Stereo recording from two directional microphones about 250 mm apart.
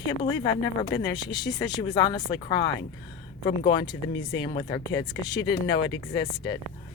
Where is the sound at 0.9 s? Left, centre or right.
Centre.